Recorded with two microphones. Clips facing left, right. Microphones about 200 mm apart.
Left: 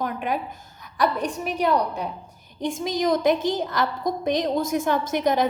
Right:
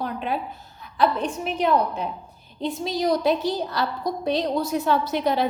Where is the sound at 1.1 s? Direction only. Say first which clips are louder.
Even; 10° left (ahead or behind).